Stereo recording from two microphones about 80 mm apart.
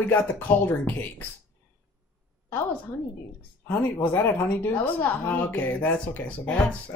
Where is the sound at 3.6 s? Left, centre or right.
Left.